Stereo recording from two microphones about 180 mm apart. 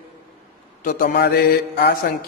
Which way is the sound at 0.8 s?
50° left (ahead or behind).